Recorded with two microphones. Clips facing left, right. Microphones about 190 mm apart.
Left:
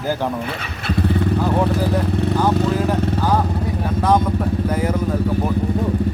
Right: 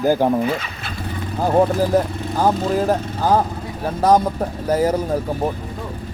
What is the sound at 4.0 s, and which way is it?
Speech, 40° right (ahead or behind).